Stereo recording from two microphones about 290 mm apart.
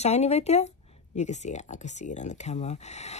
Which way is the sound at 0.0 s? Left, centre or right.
Left.